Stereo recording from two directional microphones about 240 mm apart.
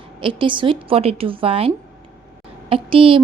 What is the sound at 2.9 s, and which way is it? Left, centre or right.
Speech, right.